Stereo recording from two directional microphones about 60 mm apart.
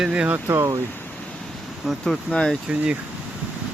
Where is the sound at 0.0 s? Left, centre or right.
Centre.